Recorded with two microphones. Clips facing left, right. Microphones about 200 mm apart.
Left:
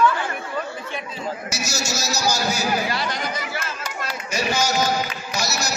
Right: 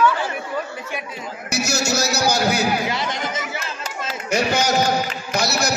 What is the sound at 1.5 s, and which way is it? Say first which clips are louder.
A man's voice: right 6 dB; 60° right (ahead or behind).